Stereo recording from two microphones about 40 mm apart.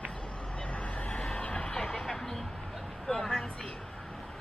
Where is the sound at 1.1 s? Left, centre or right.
Centre.